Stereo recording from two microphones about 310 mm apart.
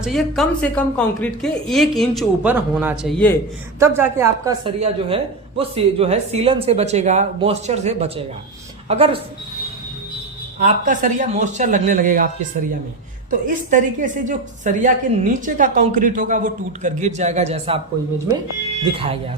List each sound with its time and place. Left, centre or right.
0.0 s a woman's voice: centre
3.8 s a woman's voice: centre
10.6 s a woman's voice: right
13.4 s a woman's voice: right